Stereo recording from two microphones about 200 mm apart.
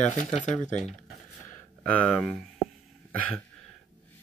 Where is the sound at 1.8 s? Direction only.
5° left (ahead or behind).